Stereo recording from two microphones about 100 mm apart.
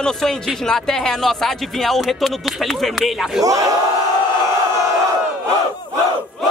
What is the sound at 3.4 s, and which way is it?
Speech, 35° right (ahead or behind).